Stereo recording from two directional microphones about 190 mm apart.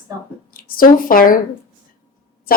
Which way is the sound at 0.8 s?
50° left (ahead or behind).